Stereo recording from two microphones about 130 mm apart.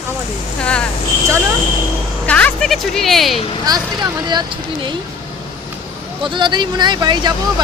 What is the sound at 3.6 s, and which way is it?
Speech, 30° right (ahead or behind).